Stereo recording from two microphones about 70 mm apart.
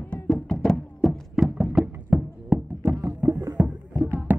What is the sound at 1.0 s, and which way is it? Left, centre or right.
Music, centre.